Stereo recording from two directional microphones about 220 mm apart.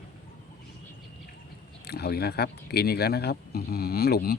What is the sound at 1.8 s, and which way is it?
Speech, 45° left (ahead or behind).